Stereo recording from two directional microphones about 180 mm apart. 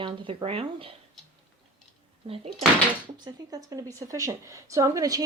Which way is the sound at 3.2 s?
20° right (ahead or behind).